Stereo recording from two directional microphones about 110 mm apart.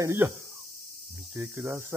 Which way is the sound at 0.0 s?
20° right (ahead or behind).